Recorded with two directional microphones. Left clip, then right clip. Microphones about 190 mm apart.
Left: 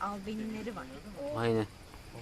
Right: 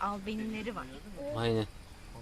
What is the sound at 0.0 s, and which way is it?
Speech, 20° right (ahead or behind).